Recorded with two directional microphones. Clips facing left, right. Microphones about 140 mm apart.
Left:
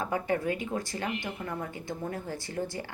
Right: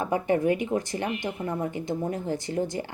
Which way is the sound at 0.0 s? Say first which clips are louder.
Right 5 dB; 20° right (ahead or behind).